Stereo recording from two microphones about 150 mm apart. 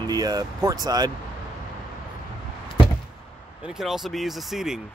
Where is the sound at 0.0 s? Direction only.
25° right (ahead or behind).